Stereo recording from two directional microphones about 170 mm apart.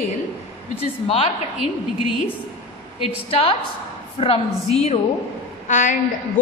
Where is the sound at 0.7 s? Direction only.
35° left (ahead or behind).